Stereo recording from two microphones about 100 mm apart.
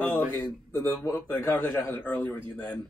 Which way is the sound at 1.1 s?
20° left (ahead or behind).